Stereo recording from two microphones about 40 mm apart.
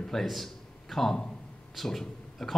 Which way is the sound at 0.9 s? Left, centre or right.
Centre.